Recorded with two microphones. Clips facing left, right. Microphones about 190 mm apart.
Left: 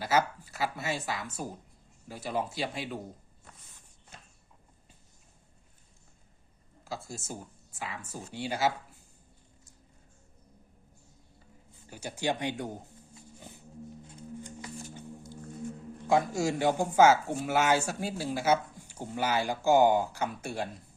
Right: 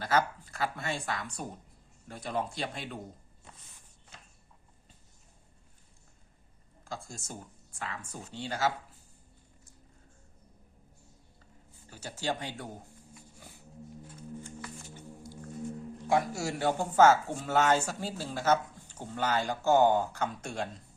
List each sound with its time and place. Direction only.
0.0 s speech: 5° left (ahead or behind)
6.8 s speech: 5° left (ahead or behind)
11.9 s speech: 15° left (ahead or behind)
13.1 s music: 20° left (ahead or behind)
16.0 s speech: 20° left (ahead or behind)